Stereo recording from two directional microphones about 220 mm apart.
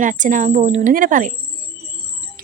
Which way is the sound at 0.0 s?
35° right (ahead or behind).